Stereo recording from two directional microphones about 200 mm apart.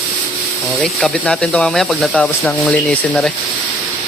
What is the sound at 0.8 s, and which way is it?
Speech, 5° left (ahead or behind).